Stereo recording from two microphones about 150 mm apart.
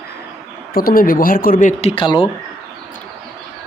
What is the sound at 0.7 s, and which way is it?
Speech, 75° left (ahead or behind).